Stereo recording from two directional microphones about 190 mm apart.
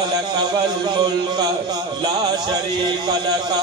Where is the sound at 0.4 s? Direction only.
20° right (ahead or behind).